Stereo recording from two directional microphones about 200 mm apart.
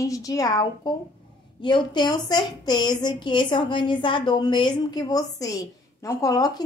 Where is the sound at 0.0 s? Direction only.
15° left (ahead or behind).